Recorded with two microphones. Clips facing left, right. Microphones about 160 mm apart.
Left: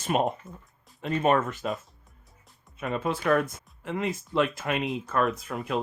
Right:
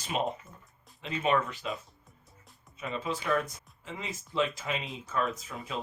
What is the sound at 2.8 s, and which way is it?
Speech, 55° left (ahead or behind).